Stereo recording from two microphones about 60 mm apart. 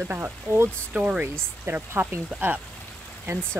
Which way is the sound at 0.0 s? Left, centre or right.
Right.